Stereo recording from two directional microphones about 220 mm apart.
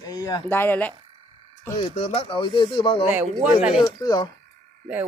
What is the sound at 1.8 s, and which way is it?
Speech, 25° left (ahead or behind).